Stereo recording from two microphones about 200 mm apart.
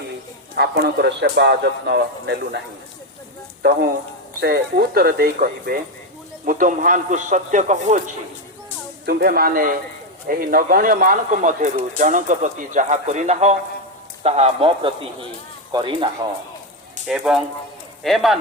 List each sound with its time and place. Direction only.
0.5 s a man's voice: 55° right (ahead or behind)
4.4 s speech: 50° right (ahead or behind)
9.0 s speech: 50° right (ahead or behind); by 16.0 s 25° right (ahead or behind)
17.1 s speech: 5° right (ahead or behind)